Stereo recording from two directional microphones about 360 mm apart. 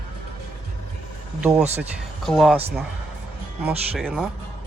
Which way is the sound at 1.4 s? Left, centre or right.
Centre.